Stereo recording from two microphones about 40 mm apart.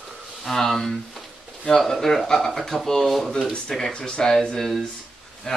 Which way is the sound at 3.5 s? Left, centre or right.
Centre.